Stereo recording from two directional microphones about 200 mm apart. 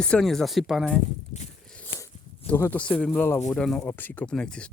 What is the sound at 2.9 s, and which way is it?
Speech, 5° left (ahead or behind).